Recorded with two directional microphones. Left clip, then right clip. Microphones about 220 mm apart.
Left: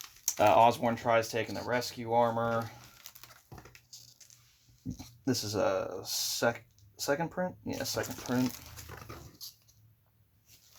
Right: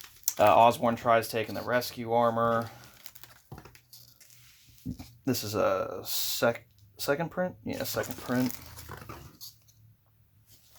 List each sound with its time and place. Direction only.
0.3 s speech: 20° right (ahead or behind)
2.6 s crumpling: 5° right (ahead or behind)
5.2 s speech: 25° right (ahead or behind)
8.4 s speech: 5° right (ahead or behind)
9.4 s a sound: centre (ahead or behind)